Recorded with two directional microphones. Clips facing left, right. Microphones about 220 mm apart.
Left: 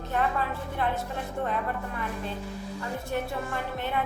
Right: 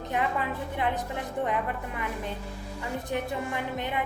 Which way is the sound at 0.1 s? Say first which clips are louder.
Left 1 dB; 15° right (ahead or behind).